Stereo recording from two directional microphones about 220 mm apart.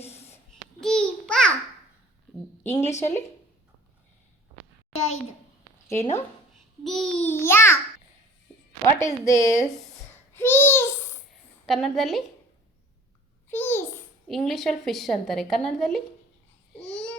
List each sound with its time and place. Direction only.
0.0 s babbling: 30° left (ahead or behind)
0.8 s babbling: 5° left (ahead or behind)
2.8 s speech: 30° left (ahead or behind)
4.9 s a child's voice: 65° left (ahead or behind)
6.8 s a child's voice: centre (ahead or behind)
9.0 s a child's voice: 15° left (ahead or behind)
9.6 s babbling: 15° left (ahead or behind)
11.6 s a woman's voice: centre (ahead or behind)
13.5 s babbling: 10° left (ahead or behind)
14.3 s a woman's voice: centre (ahead or behind)
16.8 s a sound: 5° left (ahead or behind)